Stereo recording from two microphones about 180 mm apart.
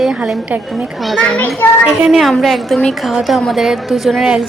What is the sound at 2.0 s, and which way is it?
A woman's voice, centre (ahead or behind).